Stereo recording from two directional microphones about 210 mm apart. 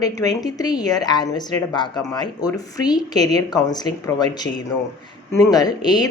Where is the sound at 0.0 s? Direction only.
15° left (ahead or behind).